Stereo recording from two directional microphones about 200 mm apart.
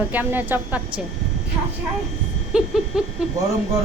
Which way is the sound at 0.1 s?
10° right (ahead or behind).